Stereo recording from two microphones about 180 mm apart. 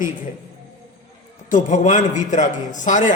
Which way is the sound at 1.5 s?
45° left (ahead or behind).